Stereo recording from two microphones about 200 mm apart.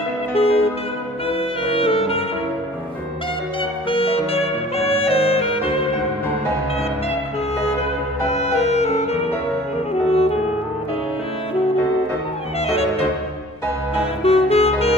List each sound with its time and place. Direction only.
0.3 s music: 30° left (ahead or behind)
1.8 s saxophone: 30° left (ahead or behind)
3.9 s saxophone: 30° left (ahead or behind)
8.3 s music: 35° left (ahead or behind)
10.0 s saxophone: 30° left (ahead or behind)
14.2 s saxophone: 30° left (ahead or behind)